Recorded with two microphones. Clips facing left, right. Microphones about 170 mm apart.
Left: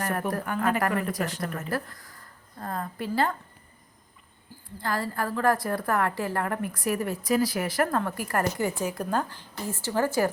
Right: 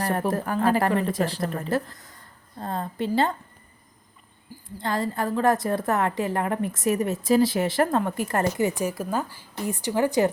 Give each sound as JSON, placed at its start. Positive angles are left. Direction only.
{"t": 0.0, "sound": "a woman's voice", "side_deg": -30}
{"t": 4.8, "sound": "a woman's voice", "side_deg": -20}
{"t": 9.0, "sound": "speech", "side_deg": -5}